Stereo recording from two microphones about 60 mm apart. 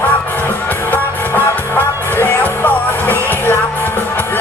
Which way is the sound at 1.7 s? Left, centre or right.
Left.